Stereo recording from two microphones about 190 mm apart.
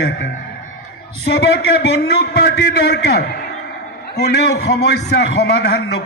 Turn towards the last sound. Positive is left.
turn(degrees=60)  # may be behind; listen again after turning